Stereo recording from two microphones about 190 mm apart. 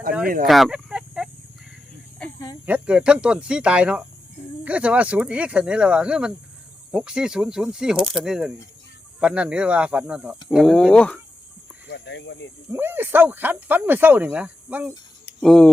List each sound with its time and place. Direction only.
0.4 s a sound: centre (ahead or behind)
2.2 s snake: 5° left (ahead or behind)
2.6 s speech: 5° right (ahead or behind)
11.9 s snake: 65° left (ahead or behind)
12.7 s speech: 10° right (ahead or behind)
15.4 s speech: 5° left (ahead or behind)